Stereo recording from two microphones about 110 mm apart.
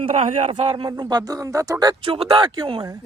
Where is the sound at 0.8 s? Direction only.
40° right (ahead or behind).